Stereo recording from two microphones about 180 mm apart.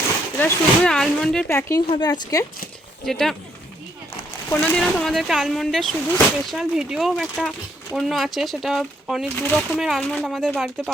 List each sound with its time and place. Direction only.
0.3 s speech: 5° left (ahead or behind)
1.5 s a woman's voice: 15° left (ahead or behind)
3.1 s speech: centre (ahead or behind)
4.4 s speech: 10° left (ahead or behind)